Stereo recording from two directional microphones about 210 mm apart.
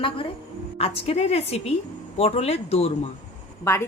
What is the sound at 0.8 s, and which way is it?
Speech, 30° left (ahead or behind).